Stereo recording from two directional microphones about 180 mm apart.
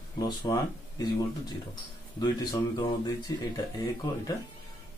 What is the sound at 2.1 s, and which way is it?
Speech, 20° left (ahead or behind).